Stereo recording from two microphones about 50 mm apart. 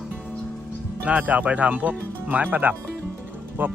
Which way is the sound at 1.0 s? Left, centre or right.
Right.